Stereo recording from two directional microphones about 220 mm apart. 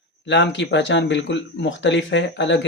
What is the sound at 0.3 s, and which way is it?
Speech, 55° left (ahead or behind).